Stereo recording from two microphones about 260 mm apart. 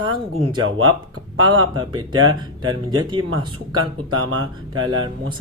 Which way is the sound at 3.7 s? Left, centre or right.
Right.